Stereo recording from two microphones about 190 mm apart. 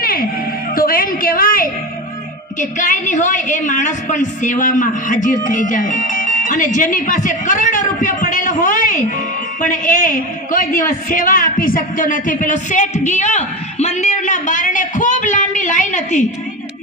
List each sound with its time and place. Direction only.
0.0 s music: 50° left (ahead or behind)
0.8 s a sound: 50° left (ahead or behind)
2.6 s a woman's voice: 45° left (ahead or behind)